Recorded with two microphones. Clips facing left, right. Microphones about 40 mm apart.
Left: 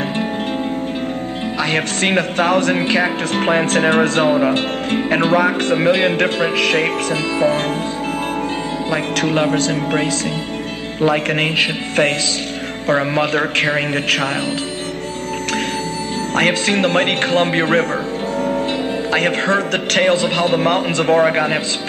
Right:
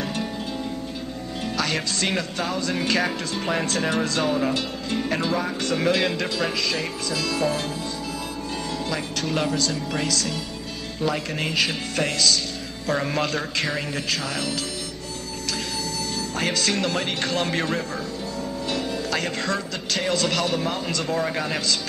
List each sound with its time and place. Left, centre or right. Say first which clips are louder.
1.6 s speech: left 7 dB; left
2.8 s speech: left 6 dB; left
3.3 s speech: left 10 dB; left
6.5 s speech: left 10 dB; left
7.3 s speech: left 9 dB; left
8.9 s speech: left 10 dB; left
16.3 s speech: left 9 dB; left
20.2 s speech: left 7 dB; left